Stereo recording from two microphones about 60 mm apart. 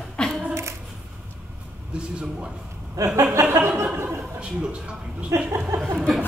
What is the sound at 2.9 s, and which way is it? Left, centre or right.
Chuckle, right.